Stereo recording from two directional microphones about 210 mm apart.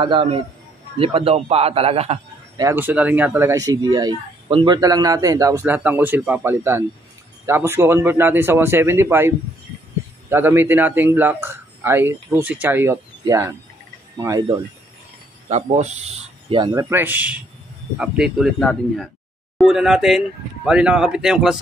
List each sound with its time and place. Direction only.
0.0 s a man's voice: 25° right (ahead or behind)
2.6 s speech: 10° right (ahead or behind)
10.3 s speech: 10° right (ahead or behind)
15.5 s a man's voice: 35° right (ahead or behind); by 21.5 s centre (ahead or behind)